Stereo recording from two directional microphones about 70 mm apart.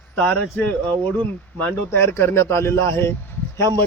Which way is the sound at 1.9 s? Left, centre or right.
Left.